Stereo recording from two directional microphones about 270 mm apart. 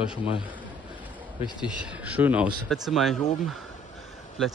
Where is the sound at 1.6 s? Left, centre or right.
Centre.